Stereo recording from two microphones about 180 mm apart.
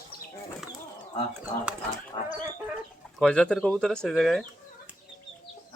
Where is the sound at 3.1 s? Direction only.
5° left (ahead or behind).